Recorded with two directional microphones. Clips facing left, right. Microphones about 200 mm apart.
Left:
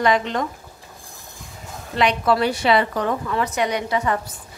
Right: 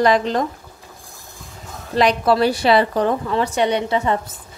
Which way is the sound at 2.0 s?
35° right (ahead or behind).